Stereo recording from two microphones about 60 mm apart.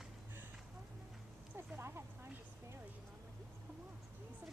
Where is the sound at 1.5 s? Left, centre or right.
Right.